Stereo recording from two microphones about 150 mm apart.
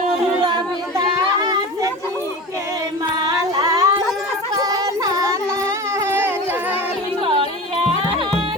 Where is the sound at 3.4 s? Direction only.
20° right (ahead or behind).